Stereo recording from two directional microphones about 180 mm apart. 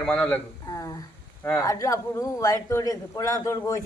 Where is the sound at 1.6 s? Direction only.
20° left (ahead or behind).